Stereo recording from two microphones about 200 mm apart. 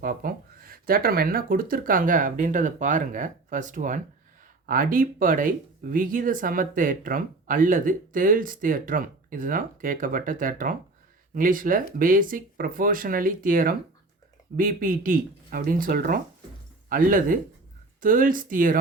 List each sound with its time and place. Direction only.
0.0 s speech: 45° right (ahead or behind)